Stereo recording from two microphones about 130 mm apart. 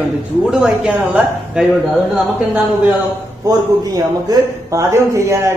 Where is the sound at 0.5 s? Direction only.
5° right (ahead or behind).